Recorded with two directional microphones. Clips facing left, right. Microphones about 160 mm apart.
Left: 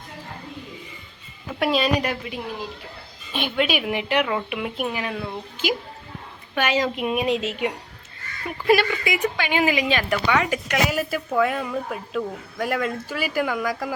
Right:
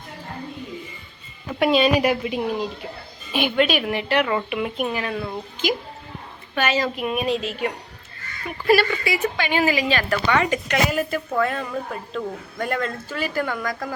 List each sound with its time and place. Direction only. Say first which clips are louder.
1.5 s a woman's voice: right 3 dB; centre (ahead or behind)
2.2 s a woman's voice: right 7 dB; 20° right (ahead or behind)
3.3 s a woman's voice: right 3 dB; centre (ahead or behind)